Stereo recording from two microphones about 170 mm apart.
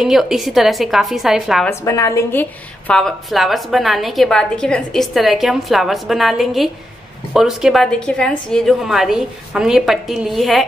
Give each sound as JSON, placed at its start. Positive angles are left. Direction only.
{"t": 0.0, "sound": "a woman's voice", "side_deg": 0}
{"t": 1.7, "sound": "a woman's voice", "side_deg": 15}
{"t": 2.9, "sound": "a woman's voice", "side_deg": 5}